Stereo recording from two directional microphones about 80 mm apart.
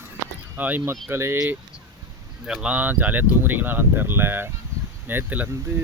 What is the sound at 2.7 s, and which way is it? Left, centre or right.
Speech, right.